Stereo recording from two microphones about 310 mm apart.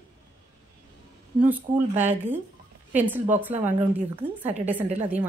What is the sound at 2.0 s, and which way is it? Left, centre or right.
A woman's voice, centre.